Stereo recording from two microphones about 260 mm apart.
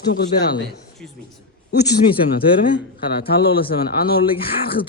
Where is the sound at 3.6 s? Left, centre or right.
Left.